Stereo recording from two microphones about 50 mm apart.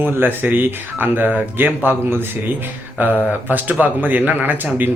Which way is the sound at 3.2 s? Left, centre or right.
Right.